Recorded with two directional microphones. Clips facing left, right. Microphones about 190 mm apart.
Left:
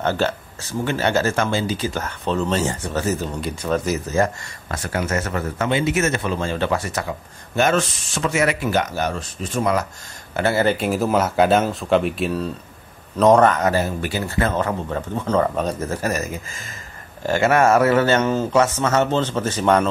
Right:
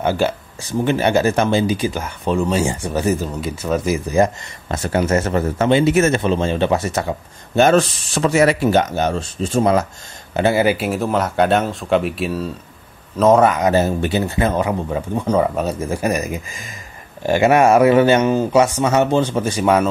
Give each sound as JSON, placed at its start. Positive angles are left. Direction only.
{"t": 0.0, "sound": "speech", "side_deg": -10}
{"t": 10.3, "sound": "speech", "side_deg": -15}
{"t": 13.7, "sound": "speech", "side_deg": -25}